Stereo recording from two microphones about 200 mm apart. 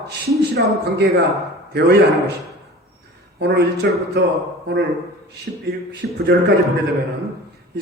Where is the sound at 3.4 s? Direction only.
55° right (ahead or behind).